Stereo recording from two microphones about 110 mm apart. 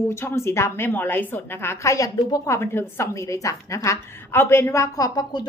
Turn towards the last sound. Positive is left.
turn(degrees=40)  # may be behind; listen again after turning